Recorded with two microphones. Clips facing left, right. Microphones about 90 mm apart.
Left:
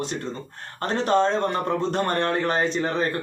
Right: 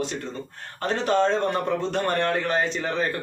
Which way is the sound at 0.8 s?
35° left (ahead or behind).